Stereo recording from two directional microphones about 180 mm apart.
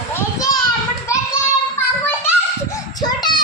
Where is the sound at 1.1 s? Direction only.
15° left (ahead or behind).